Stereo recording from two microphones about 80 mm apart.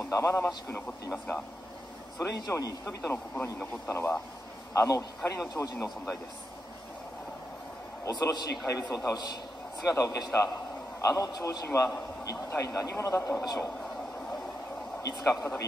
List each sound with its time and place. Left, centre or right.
0.0 s speech: left
1.1 s speech: centre
2.1 s a man's voice: left
4.7 s a man's voice: left
5.5 s a man's voice: left
8.0 s a man's voice: left
8.6 s a man's voice: left
15.0 s a man's voice: left